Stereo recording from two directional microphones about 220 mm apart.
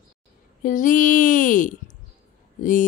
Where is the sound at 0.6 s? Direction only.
35° left (ahead or behind).